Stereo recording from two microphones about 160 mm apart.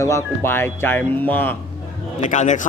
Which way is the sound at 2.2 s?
50° left (ahead or behind).